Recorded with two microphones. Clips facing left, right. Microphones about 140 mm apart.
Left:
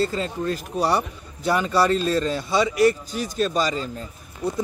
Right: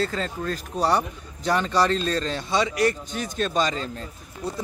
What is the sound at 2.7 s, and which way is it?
Speech, 45° right (ahead or behind).